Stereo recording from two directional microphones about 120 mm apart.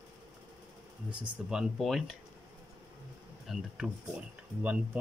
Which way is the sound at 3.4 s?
Centre (ahead or behind).